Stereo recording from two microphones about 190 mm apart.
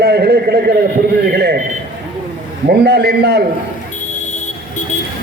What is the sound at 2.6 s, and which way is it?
Speech, 60° right (ahead or behind).